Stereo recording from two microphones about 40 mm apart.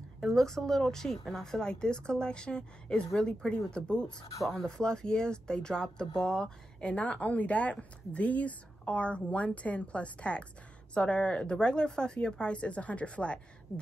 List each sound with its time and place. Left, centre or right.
0.3 s speech: centre
6.8 s speech: left
13.7 s speech: left